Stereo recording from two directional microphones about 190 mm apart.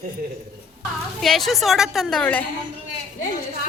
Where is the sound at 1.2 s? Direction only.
Centre (ahead or behind).